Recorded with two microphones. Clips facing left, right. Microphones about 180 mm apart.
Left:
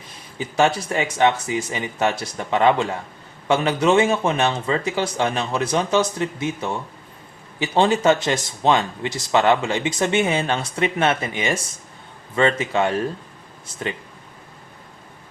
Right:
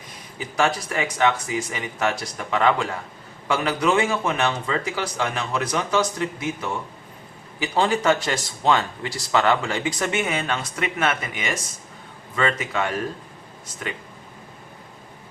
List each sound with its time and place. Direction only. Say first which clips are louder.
0.3 s speech: left 4 dB; 25° left (ahead or behind)